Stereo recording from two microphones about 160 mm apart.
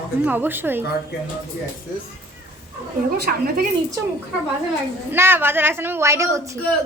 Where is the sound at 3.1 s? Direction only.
85° right.